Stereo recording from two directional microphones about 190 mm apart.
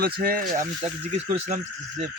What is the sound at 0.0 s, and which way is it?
Speech, 50° right (ahead or behind).